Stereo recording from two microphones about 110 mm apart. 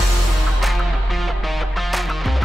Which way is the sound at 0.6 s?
Centre (ahead or behind).